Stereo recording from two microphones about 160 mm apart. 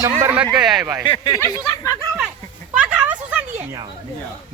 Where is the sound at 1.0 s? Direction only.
30° left (ahead or behind).